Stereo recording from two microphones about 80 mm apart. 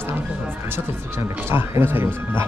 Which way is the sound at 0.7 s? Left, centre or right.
Right.